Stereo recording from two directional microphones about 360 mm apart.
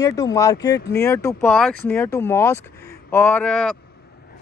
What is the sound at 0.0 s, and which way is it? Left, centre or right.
Speech, centre.